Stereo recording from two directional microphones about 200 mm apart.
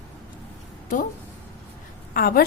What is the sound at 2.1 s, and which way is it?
Speech, 50° left (ahead or behind).